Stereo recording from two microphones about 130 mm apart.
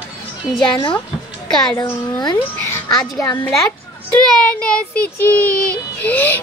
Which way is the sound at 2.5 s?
15° left (ahead or behind).